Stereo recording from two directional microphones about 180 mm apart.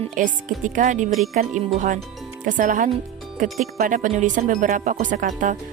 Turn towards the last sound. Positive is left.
turn(degrees=-50)  # may be behind; listen again after turning